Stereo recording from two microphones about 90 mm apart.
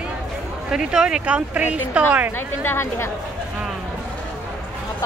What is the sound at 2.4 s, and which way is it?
Speech, 25° left (ahead or behind).